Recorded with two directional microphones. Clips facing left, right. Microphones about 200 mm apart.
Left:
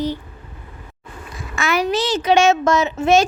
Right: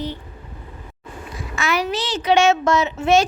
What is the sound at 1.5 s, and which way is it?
A woman's voice, 50° left (ahead or behind).